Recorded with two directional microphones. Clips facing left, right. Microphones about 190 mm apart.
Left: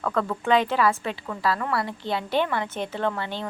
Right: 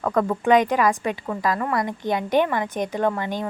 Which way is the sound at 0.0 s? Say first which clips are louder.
Right 5 dB; 20° right (ahead or behind).